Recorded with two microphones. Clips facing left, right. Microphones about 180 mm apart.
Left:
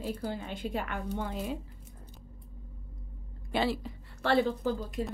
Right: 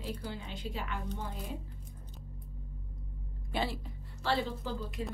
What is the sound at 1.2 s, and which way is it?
Speech, 90° left.